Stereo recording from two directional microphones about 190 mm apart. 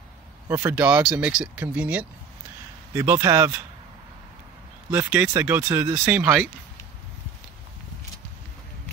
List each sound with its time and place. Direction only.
0.5 s speech: 10° right (ahead or behind)
4.9 s speech: 15° right (ahead or behind)